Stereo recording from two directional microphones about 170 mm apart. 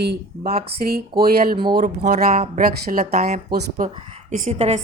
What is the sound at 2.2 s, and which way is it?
Speech, 60° right (ahead or behind).